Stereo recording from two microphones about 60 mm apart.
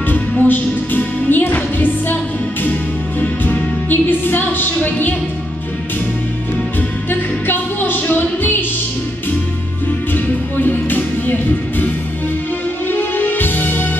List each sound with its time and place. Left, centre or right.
0.4 s music: left
3.9 s music: left
7.1 s music: left
10.1 s music: left
12.9 s music: left